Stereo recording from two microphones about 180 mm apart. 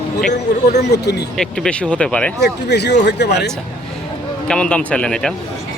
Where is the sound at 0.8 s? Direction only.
70° left (ahead or behind).